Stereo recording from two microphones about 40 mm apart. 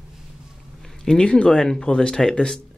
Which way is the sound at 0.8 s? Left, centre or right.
Centre.